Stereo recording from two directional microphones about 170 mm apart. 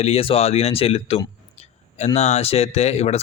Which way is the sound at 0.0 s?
35° left (ahead or behind).